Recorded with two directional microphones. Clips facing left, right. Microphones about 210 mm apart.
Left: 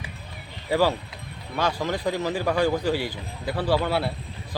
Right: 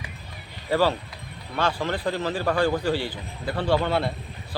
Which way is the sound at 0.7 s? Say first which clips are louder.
Even; 10° left (ahead or behind).